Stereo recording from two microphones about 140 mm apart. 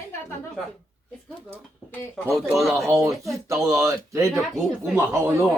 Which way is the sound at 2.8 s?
25° right (ahead or behind).